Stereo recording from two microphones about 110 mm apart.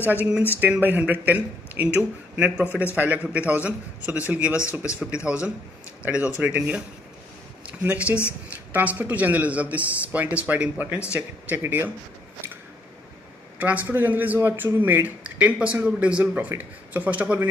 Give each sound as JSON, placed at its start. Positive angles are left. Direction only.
{"t": 0.0, "sound": "speech", "side_deg": -15}
{"t": 13.6, "sound": "speech", "side_deg": -15}